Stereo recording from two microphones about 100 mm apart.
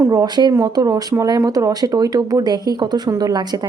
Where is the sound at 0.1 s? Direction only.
40° right (ahead or behind).